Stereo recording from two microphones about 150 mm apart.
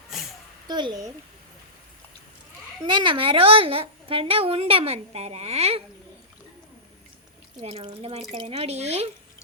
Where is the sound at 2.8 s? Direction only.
35° right (ahead or behind).